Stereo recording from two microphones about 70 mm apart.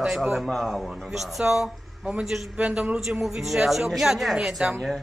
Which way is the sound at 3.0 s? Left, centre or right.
Centre.